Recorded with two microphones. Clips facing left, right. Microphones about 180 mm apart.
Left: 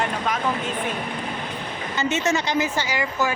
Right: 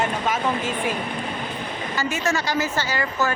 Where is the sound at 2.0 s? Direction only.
20° left (ahead or behind).